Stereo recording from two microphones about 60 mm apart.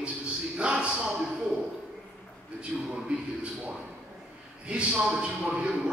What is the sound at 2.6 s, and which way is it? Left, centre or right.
Speech, centre.